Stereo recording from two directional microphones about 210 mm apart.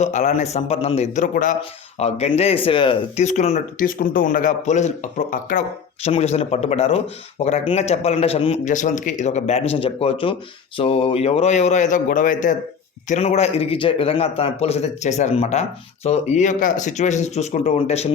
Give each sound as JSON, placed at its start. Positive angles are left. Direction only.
{"t": 0.0, "sound": "a man's voice", "side_deg": 35}